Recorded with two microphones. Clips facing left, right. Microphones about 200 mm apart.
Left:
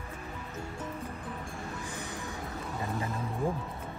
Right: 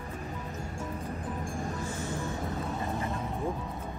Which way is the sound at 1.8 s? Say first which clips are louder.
Right 5 dB; 15° left (ahead or behind).